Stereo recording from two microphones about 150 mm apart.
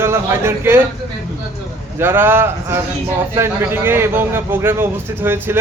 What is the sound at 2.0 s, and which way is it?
A man's voice, 15° right (ahead or behind).